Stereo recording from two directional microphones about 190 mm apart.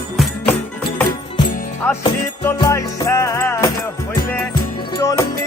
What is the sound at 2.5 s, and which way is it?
Music, 15° left (ahead or behind).